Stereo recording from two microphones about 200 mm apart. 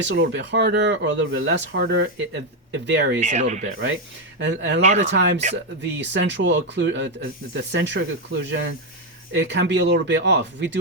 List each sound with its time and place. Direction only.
0.0 s speech: 65° right (ahead or behind)
3.2 s speech: 35° right (ahead or behind)
4.4 s speech: 60° right (ahead or behind)
4.8 s speech: 35° right (ahead or behind)
5.1 s speech: 60° right (ahead or behind)